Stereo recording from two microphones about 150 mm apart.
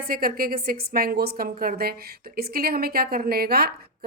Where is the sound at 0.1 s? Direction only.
75° right (ahead or behind).